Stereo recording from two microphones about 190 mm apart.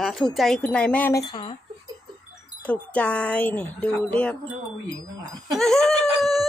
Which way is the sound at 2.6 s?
5° left (ahead or behind).